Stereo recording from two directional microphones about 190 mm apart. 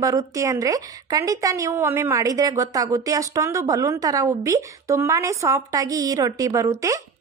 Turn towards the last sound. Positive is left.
turn(degrees=-15)  # may be behind; listen again after turning